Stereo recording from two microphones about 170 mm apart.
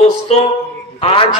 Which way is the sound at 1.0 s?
35° left (ahead or behind).